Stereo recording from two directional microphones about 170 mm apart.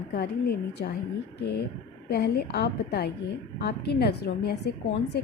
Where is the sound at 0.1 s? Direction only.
70° left (ahead or behind).